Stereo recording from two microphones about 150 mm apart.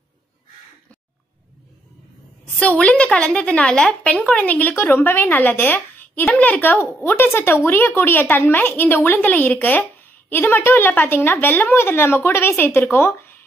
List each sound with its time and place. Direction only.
2.6 s a woman's voice: 10° left (ahead or behind)